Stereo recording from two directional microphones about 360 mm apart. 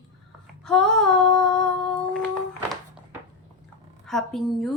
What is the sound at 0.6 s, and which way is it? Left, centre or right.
Female singing, centre.